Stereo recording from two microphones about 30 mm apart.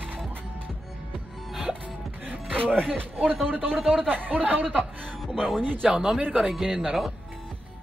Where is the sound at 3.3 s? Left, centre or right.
Left.